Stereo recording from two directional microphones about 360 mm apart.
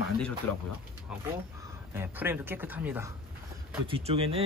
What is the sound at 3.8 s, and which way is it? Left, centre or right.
Speech, centre.